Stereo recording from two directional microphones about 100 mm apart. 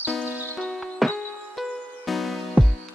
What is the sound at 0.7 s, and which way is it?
Music, 5° left (ahead or behind).